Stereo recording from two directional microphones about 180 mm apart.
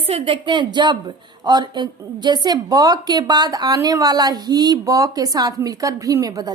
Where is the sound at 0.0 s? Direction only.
30° right (ahead or behind).